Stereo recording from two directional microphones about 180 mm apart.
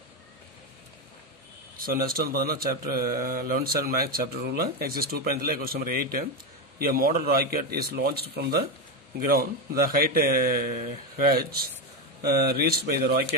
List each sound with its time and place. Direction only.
1.8 s a man's voice: 55° right (ahead or behind)